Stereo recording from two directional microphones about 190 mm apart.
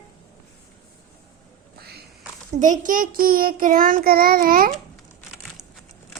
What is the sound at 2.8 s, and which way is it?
Child singing, 45° right (ahead or behind).